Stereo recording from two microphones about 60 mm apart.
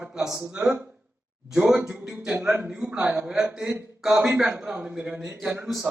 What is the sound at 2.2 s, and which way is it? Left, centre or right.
A man's voice, centre.